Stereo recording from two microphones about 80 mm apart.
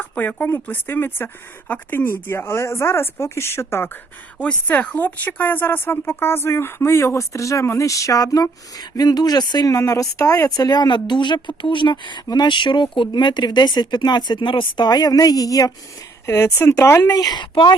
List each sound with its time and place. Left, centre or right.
0.0 s speech: left
4.4 s speech: centre; by 9.6 s left
9.6 s speech: left
10.5 s speech: left
12.3 s speech: left
16.2 s speech: left
17.1 s speech: left
17.5 s speech: left